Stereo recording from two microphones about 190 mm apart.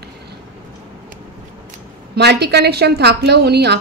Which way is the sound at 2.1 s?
60° right (ahead or behind).